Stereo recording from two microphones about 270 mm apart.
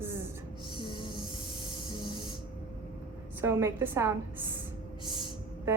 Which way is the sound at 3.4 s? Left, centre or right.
Centre.